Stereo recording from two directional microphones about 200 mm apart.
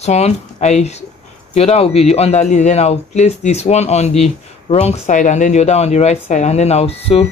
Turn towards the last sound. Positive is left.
turn(degrees=30)  # may be behind; listen again after turning